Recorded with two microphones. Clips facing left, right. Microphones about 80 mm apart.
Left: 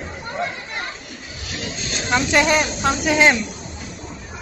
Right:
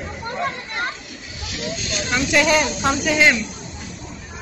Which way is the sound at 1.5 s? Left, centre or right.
Left.